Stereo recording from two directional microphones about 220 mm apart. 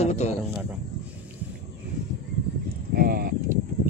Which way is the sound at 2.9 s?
45° right (ahead or behind).